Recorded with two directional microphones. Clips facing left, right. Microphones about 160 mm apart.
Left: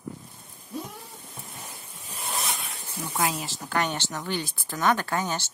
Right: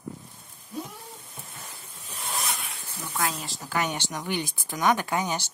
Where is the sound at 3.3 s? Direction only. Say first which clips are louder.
Left 2 dB; centre (ahead or behind); by 5.5 s 15° right (ahead or behind).